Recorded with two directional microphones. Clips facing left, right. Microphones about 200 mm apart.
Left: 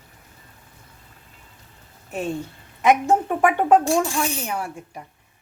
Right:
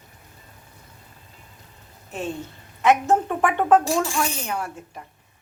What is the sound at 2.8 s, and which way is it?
A woman's voice, 15° left (ahead or behind).